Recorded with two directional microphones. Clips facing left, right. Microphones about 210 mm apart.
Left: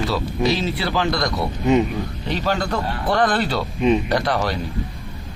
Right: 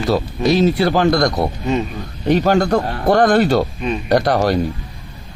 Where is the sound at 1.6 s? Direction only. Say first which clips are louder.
Left 6 dB; 15° left (ahead or behind).